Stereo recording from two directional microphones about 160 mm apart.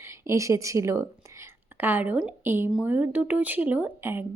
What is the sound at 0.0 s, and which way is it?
A woman's voice, 20° right (ahead or behind).